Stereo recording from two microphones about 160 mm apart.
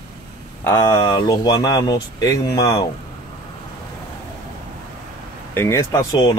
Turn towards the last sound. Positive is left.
turn(degrees=25)  # may be behind; listen again after turning